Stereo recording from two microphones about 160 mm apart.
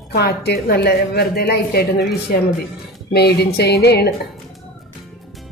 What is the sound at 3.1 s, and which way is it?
A woman's voice, 90° left.